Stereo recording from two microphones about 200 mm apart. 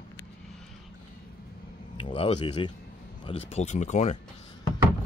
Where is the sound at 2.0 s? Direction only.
30° left (ahead or behind).